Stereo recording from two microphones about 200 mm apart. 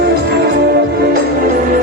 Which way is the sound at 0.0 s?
55° right (ahead or behind).